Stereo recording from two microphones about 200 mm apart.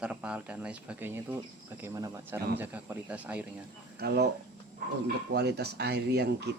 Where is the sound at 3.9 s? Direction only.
55° right (ahead or behind).